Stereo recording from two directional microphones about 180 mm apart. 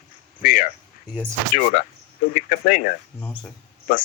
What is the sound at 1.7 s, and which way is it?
Speech, 50° left (ahead or behind).